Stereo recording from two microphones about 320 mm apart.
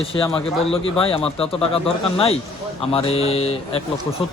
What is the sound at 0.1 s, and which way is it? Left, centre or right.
Speech, centre.